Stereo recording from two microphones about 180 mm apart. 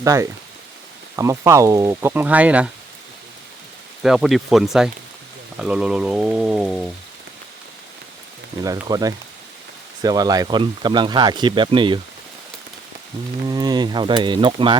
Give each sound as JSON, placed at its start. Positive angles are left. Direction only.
{"t": 0.0, "sound": "speech", "side_deg": -15}
{"t": 4.0, "sound": "speech", "side_deg": 0}
{"t": 8.9, "sound": "speech", "side_deg": -20}
{"t": 13.4, "sound": "speech", "side_deg": -25}